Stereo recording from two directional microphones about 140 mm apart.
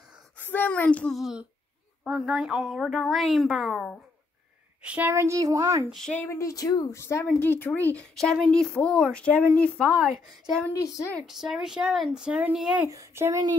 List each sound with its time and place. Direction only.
0.4 s a child's voice: 15° left (ahead or behind)
4.8 s a woman's voice: 15° right (ahead or behind)
5.9 s a woman's voice: 5° left (ahead or behind)
6.2 s speech: 20° left (ahead or behind)
10.8 s speech: 25° left (ahead or behind)
11.1 s a woman's voice: centre (ahead or behind)
12.9 s a woman's voice: 20° right (ahead or behind)